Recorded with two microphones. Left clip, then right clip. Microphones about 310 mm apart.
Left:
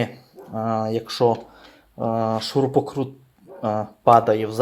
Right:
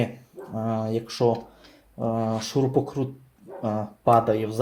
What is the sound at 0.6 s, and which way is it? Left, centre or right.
Speech, left.